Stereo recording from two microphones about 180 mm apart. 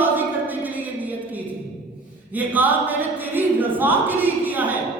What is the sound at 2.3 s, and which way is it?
Speech, 10° right (ahead or behind).